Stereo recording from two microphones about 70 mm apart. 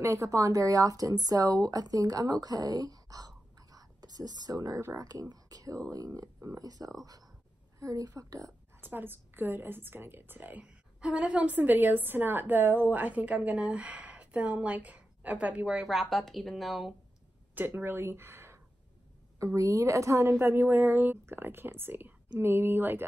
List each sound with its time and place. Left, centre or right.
0.0 s speech: right
8.8 s a woman's voice: right
10.6 s a woman's voice: centre
17.6 s speech: right
19.3 s a woman's voice: right